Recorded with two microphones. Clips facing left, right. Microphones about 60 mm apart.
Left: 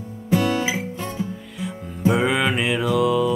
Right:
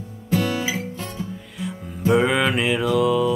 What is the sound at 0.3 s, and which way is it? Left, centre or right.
Music, centre.